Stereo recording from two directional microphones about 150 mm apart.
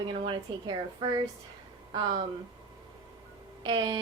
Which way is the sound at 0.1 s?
30° right (ahead or behind).